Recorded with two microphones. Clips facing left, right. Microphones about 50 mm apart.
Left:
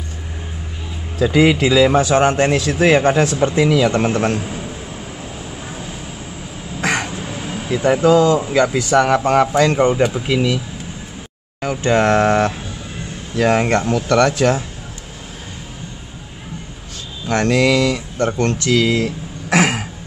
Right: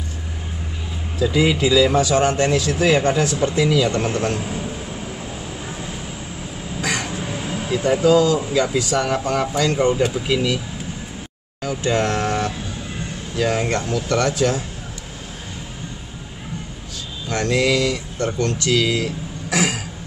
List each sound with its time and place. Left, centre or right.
1.2 s a man's voice: left
4.4 s a man's voice: centre
6.8 s a sound: left
7.2 s a sound: centre
7.8 s a man's voice: left
11.6 s a man's voice: left
17.3 s speech: left